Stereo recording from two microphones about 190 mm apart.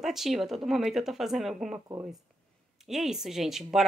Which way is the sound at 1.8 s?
15° right (ahead or behind).